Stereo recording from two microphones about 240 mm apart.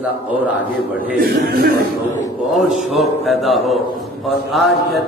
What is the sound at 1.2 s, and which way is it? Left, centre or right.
Speech, right.